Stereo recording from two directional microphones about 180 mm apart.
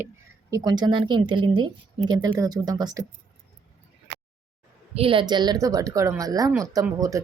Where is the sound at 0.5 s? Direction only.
25° right (ahead or behind).